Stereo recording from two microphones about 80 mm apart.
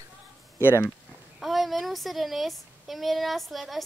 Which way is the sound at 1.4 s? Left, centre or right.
Centre.